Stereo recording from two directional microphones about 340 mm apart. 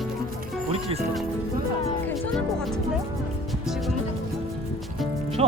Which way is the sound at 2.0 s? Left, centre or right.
Centre.